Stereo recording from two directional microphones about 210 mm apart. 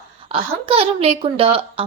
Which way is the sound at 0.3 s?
25° right (ahead or behind).